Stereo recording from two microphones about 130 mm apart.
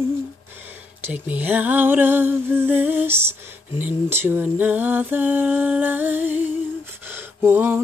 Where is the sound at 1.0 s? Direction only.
10° right (ahead or behind).